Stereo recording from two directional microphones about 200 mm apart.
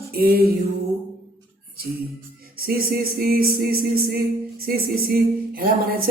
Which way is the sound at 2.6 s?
50° right (ahead or behind).